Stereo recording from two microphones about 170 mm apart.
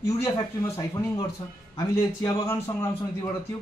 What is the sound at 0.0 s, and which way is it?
Speech, 15° left (ahead or behind).